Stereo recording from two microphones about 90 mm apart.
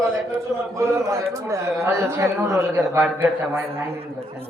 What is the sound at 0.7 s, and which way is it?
A man's voice, 35° right (ahead or behind).